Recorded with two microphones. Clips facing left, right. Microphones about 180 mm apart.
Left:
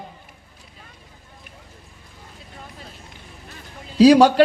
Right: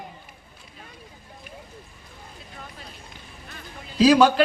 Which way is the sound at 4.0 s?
35° left (ahead or behind).